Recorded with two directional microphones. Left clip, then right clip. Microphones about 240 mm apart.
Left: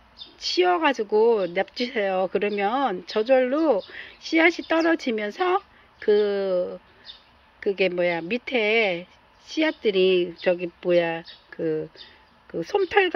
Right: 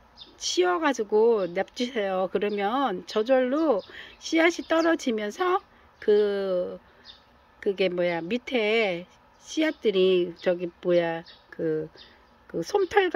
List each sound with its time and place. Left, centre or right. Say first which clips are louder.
0.4 s speech: left 3 dB; centre